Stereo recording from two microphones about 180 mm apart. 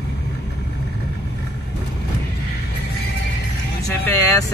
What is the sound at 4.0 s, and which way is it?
Vehicle, 10° left (ahead or behind).